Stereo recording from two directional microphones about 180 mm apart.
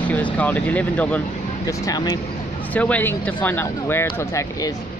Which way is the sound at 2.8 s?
10° left (ahead or behind).